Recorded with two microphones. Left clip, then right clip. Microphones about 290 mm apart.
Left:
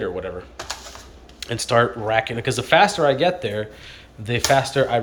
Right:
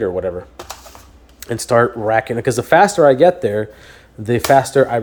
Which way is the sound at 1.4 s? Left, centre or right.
Right.